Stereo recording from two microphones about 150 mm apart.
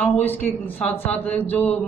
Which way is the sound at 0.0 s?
10° left (ahead or behind).